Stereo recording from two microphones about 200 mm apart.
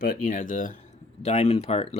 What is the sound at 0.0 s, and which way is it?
Speech, 45° left (ahead or behind).